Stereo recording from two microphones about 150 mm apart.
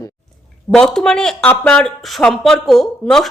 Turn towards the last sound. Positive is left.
turn(degrees=5)  # may be behind; listen again after turning